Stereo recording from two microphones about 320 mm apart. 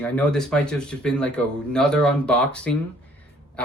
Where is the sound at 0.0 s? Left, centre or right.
Centre.